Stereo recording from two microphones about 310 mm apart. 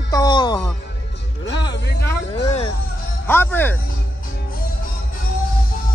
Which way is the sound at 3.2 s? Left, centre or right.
Centre.